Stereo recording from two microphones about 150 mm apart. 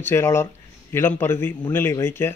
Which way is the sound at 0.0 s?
15° left (ahead or behind).